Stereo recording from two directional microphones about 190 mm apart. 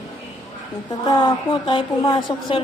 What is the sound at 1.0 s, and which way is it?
A woman's voice, 25° left (ahead or behind).